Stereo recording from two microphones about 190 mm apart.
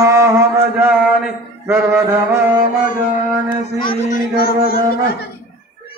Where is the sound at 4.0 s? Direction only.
45° left (ahead or behind).